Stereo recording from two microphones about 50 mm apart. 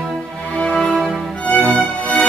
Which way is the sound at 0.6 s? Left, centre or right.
Centre.